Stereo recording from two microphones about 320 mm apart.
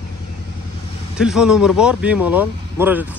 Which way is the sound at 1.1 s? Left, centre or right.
Centre.